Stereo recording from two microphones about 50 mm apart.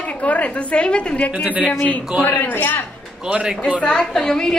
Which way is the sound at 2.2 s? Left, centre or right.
Left.